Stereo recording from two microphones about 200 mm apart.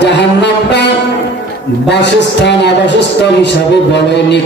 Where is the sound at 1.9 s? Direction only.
60° left (ahead or behind).